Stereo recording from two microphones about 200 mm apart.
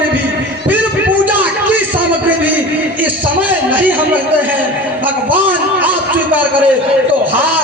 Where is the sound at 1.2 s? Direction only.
10° right (ahead or behind).